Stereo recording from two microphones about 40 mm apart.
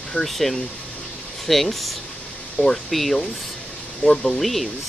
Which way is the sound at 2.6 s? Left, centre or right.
Left.